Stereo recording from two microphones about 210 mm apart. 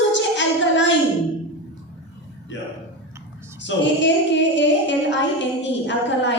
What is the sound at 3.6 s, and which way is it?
A child's voice, 60° left (ahead or behind).